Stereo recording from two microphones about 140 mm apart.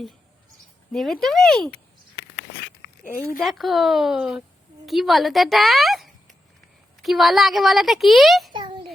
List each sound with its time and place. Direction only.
0.9 s a woman's voice: centre (ahead or behind)
3.0 s speech: 90° left
3.4 s a woman's voice: centre (ahead or behind)
8.5 s a sound: 35° right (ahead or behind)